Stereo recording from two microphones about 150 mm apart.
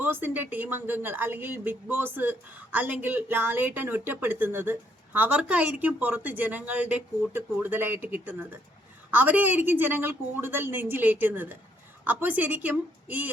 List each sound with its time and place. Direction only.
0.0 s speech: 15° right (ahead or behind)